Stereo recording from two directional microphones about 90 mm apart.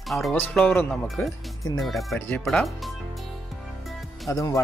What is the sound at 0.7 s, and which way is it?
Speech, 25° left (ahead or behind).